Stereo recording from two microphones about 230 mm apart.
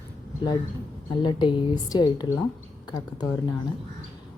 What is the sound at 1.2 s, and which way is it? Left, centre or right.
A woman's voice, left.